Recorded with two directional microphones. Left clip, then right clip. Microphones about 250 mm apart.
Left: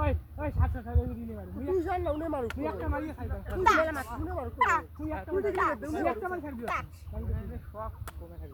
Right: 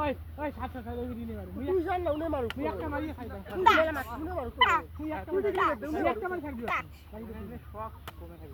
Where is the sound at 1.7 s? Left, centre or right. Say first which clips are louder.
Right 1 dB; centre.